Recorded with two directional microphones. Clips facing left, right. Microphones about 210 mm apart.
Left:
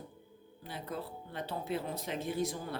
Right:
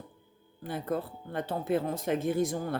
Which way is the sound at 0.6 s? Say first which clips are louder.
Right 8 dB; 50° right (ahead or behind).